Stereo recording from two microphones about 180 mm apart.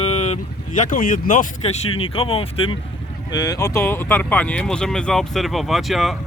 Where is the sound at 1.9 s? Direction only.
30° left (ahead or behind).